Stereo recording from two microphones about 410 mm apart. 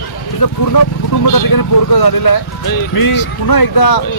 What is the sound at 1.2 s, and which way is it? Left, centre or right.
Speech, left.